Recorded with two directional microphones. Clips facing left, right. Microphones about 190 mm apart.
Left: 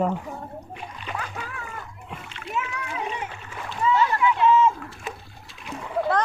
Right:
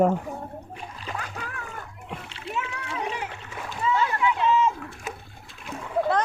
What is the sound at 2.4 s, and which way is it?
Splash, 30° right (ahead or behind).